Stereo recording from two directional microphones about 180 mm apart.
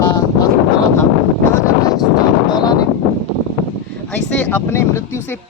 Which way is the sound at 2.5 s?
20° left (ahead or behind).